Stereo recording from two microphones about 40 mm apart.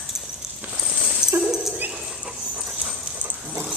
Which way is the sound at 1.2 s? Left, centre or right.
Left.